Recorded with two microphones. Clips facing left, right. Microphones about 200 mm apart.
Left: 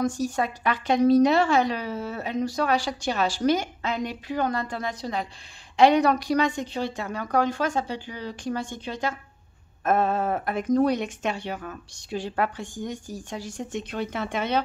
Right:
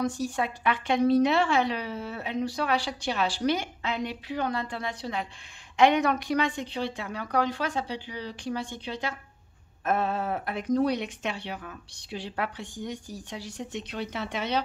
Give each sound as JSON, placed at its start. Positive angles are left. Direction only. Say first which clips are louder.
{"t": 0.0, "sound": "a woman's voice", "louder": "left 3 dB", "side_deg": 45}